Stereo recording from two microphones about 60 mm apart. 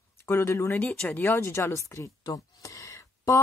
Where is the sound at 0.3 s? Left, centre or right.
Left.